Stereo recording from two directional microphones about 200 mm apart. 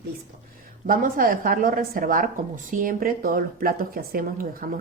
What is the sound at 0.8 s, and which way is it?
A woman's voice, 45° right (ahead or behind).